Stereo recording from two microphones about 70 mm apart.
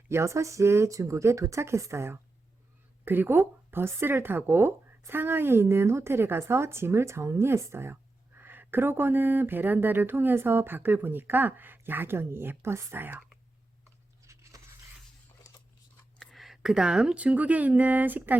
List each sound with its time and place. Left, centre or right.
0.1 s speech: right
3.0 s a woman's voice: right
14.3 s a sound: right
16.1 s speech: centre; by 18.3 s right